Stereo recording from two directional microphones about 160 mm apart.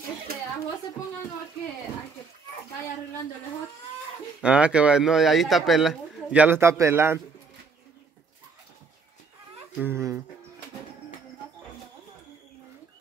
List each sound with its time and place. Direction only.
4.4 s speech: 5° right (ahead or behind)
9.8 s speech: 15° right (ahead or behind)